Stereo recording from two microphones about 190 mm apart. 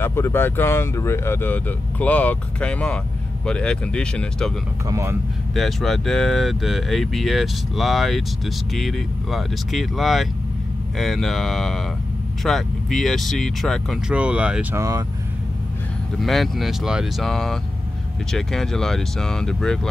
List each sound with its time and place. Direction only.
0.0 s speech: 10° left (ahead or behind)
4.8 s speech: 15° right (ahead or behind)
5.5 s speech: centre (ahead or behind); by 15.0 s 15° right (ahead or behind)
16.2 s speech: centre (ahead or behind)